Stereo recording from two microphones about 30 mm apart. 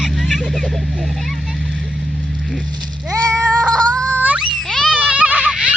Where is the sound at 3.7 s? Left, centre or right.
Left.